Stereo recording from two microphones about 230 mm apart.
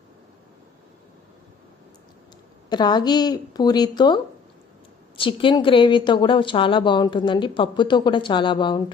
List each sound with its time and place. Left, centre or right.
2.6 s a woman's voice: centre